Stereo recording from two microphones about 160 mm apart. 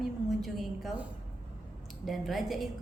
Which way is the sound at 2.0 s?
Centre (ahead or behind).